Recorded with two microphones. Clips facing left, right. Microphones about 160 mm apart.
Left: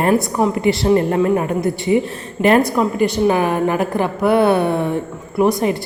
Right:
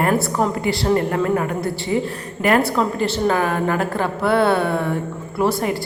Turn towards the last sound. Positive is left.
turn(degrees=20)  # may be behind; listen again after turning